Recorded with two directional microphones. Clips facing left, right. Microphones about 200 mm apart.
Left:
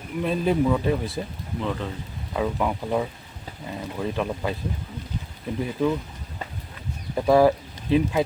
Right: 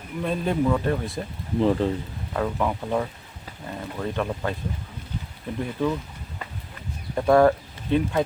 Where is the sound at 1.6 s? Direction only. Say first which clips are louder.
Right 8 dB; 35° right (ahead or behind).